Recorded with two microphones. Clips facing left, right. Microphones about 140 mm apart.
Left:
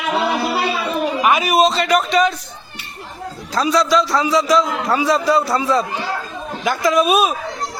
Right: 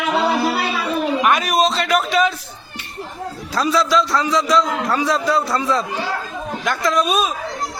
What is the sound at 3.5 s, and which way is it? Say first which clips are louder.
A man's voice: left 2 dB; centre (ahead or behind).